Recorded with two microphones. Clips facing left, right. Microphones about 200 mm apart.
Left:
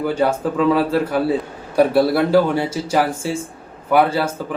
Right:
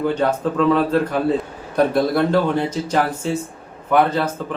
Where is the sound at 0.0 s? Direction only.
10° left (ahead or behind).